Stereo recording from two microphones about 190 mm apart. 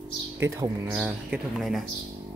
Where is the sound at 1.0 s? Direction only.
5° right (ahead or behind).